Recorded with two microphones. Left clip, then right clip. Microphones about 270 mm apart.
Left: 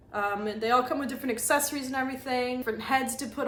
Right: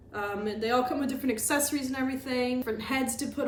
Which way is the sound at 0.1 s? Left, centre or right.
Centre.